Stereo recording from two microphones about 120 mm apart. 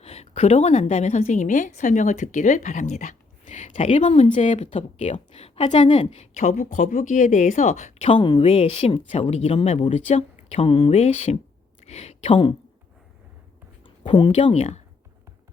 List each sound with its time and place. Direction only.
0.0 s a woman's voice: 60° left (ahead or behind)
5.9 s speech: 45° left (ahead or behind)
6.1 s speech: 75° left (ahead or behind)
8.1 s a woman's voice: 45° left (ahead or behind)
13.8 s speech: 45° left (ahead or behind)
14.5 s speech: 65° left (ahead or behind)